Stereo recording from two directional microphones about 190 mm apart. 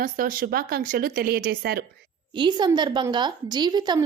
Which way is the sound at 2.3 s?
25° right (ahead or behind).